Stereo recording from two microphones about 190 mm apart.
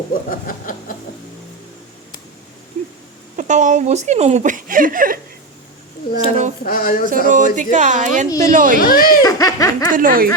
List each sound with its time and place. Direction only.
0.1 s a sound: 45° left (ahead or behind)
3.3 s speech: 40° right (ahead or behind)
6.6 s speech: 50° left (ahead or behind)
7.3 s speech: 40° right (ahead or behind)
8.8 s speech: 50° left (ahead or behind)
9.2 s laughter: 15° left (ahead or behind)
9.9 s speech: 45° right (ahead or behind)